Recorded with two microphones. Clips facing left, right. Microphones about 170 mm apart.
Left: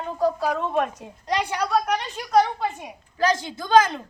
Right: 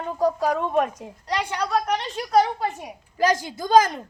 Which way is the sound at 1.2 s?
15° left (ahead or behind).